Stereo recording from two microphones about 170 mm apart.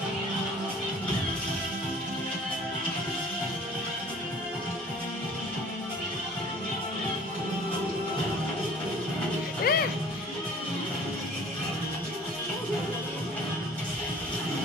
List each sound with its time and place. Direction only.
9.7 s music: 60° left (ahead or behind)